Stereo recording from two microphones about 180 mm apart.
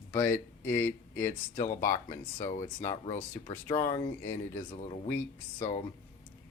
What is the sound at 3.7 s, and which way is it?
Speech, 20° left (ahead or behind).